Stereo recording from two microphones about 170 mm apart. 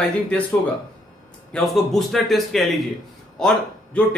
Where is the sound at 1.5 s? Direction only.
Centre (ahead or behind).